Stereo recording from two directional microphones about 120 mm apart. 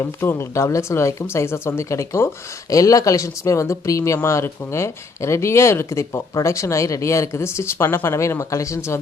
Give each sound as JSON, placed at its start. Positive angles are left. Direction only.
{"t": 0.0, "sound": "speech", "side_deg": 20}